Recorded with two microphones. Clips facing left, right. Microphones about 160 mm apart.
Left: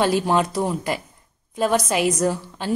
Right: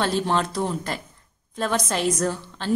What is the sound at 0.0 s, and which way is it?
A woman's voice, 10° left (ahead or behind).